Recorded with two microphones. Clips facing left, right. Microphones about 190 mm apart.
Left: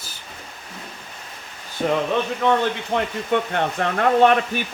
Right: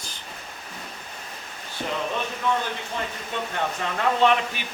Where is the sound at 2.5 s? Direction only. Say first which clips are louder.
Left 6 dB; 65° left (ahead or behind).